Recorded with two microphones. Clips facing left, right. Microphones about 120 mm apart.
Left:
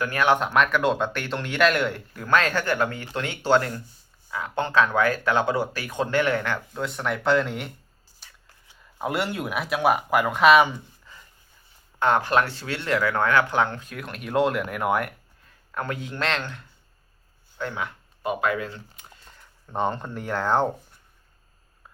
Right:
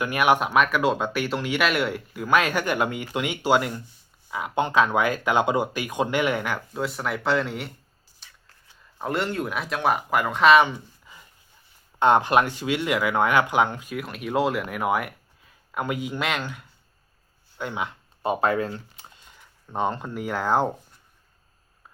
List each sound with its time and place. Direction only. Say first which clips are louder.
0.0 s speech: right 1 dB; 15° right (ahead or behind)
9.0 s speech: even; 5° left (ahead or behind)
11.0 s a sound: even; 15° right (ahead or behind)
11.9 s speech: right 3 dB; 20° right (ahead or behind)
18.2 s speech: right 3 dB; 30° right (ahead or behind)
19.4 s speech: even; centre (ahead or behind)